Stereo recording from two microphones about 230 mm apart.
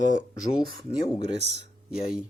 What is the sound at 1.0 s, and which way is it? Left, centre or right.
Speech, left.